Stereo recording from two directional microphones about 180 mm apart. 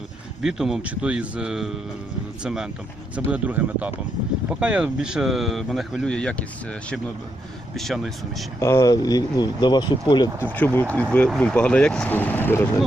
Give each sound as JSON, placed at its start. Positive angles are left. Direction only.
{"t": 0.4, "sound": "speech", "side_deg": -5}
{"t": 8.5, "sound": "speech", "side_deg": 15}
{"t": 10.4, "sound": "speech", "side_deg": 10}